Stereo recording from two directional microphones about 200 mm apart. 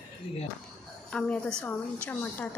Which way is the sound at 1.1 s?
5° left (ahead or behind).